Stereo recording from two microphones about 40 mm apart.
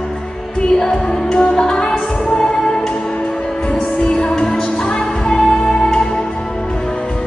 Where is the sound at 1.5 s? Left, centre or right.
Centre.